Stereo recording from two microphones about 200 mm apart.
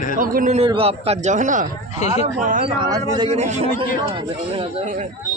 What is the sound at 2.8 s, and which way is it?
Speech, 20° right (ahead or behind).